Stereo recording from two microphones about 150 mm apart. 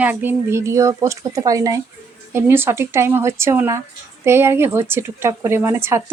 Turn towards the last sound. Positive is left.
turn(degrees=-15)  # may be behind; listen again after turning